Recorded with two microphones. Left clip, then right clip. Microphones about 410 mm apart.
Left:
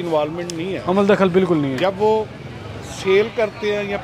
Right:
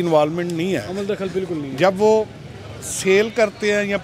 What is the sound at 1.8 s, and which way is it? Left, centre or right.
Speech, right.